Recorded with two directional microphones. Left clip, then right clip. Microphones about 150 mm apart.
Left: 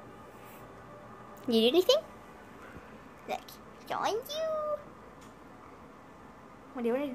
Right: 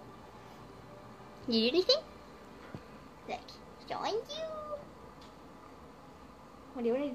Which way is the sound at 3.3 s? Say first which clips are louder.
Left 4 dB; 15° left (ahead or behind).